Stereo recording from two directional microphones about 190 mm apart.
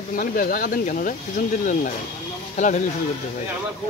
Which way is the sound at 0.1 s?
50° left (ahead or behind).